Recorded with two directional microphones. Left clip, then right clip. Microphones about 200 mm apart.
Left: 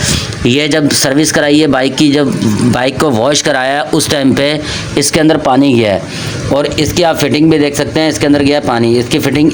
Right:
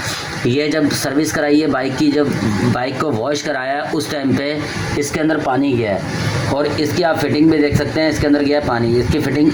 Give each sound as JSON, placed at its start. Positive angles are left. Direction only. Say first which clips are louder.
{"t": 0.4, "sound": "a man's voice", "louder": "left 6 dB", "side_deg": 50}